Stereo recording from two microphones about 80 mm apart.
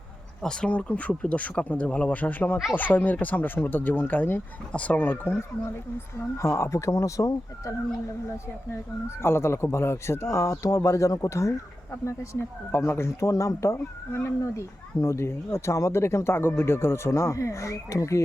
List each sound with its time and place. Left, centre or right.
0.4 s speech: centre
6.1 s speech: left
8.7 s speech: left